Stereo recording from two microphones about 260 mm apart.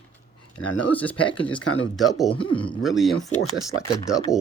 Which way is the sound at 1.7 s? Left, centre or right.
Left.